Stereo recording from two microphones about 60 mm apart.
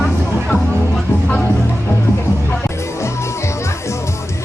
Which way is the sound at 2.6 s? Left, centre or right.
Left.